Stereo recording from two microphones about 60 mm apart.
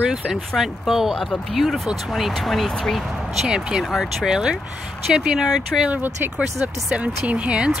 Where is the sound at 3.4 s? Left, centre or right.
Centre.